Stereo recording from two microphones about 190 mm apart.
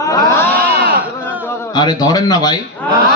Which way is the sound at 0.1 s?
10° left (ahead or behind).